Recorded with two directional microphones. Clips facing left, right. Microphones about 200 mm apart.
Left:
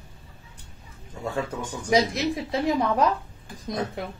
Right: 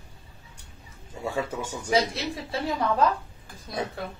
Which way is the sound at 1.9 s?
15° left (ahead or behind).